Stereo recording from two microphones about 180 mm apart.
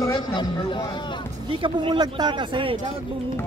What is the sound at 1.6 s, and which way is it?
Speech, 30° right (ahead or behind).